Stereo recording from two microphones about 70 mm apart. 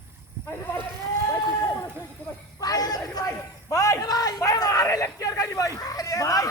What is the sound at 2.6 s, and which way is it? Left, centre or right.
A man's voice, left.